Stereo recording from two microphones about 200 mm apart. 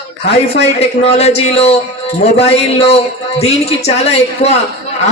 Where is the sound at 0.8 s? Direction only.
30° left (ahead or behind).